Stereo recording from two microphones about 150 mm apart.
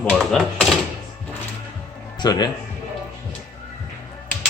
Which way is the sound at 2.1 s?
25° left (ahead or behind).